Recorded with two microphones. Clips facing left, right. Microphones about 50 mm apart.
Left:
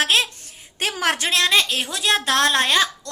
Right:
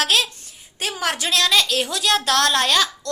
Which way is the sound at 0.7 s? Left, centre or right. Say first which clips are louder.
Left 2 dB; left.